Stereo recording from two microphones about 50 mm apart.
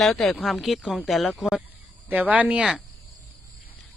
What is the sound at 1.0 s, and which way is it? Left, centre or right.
Speech, centre.